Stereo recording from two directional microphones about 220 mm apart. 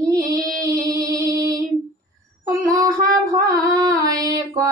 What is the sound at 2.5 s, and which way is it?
Child singing, 15° right (ahead or behind).